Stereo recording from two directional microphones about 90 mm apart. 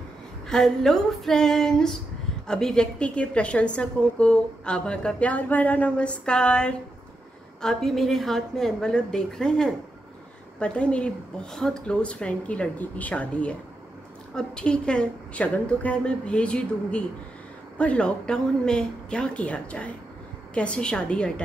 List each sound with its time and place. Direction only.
0.5 s a woman's voice: 5° left (ahead or behind)